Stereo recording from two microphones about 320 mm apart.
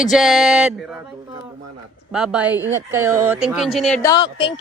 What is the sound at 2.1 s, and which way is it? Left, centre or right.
Speech, centre.